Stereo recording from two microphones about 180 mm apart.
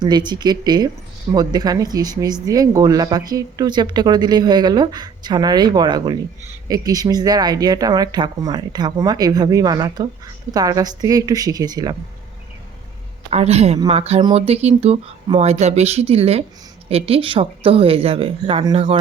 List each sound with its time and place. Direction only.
0.0 s speech: 25° right (ahead or behind)
13.3 s speech: 35° right (ahead or behind)